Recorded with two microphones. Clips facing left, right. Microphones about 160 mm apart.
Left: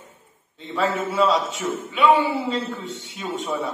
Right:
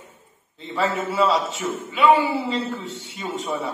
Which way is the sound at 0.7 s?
Centre (ahead or behind).